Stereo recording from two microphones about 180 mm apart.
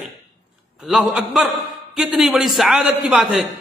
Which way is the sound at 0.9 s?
5° right (ahead or behind).